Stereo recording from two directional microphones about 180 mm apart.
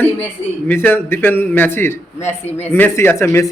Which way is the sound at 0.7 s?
10° left (ahead or behind).